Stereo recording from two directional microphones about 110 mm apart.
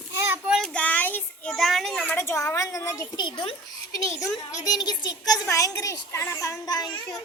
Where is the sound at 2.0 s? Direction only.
20° left (ahead or behind).